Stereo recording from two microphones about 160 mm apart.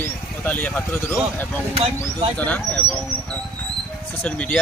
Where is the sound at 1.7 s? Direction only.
40° right (ahead or behind).